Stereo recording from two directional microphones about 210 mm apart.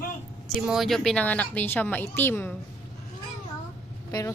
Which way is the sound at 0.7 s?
Centre (ahead or behind).